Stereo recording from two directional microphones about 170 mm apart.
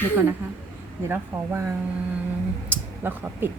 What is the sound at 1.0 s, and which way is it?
Speech, 15° right (ahead or behind).